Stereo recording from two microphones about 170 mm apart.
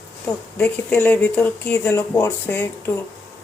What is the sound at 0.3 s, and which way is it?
Speech, 10° left (ahead or behind).